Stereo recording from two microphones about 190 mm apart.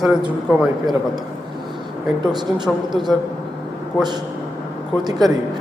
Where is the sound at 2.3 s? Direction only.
20° right (ahead or behind).